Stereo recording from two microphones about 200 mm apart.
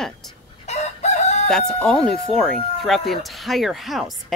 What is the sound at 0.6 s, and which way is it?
Chicken, 35° left (ahead or behind).